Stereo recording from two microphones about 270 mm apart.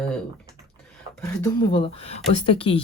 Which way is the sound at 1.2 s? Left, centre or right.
Centre.